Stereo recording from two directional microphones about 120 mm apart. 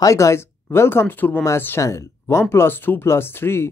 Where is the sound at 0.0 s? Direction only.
25° left (ahead or behind).